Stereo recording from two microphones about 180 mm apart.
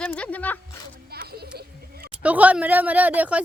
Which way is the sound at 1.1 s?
60° right (ahead or behind).